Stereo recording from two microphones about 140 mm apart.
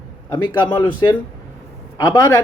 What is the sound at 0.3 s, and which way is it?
Speech, 30° left (ahead or behind).